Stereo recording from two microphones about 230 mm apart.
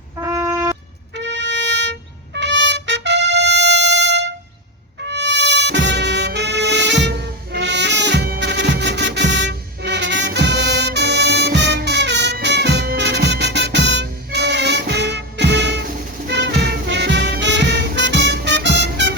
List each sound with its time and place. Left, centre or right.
0.2 s a sound: centre
1.1 s trumpet: right
5.0 s music: right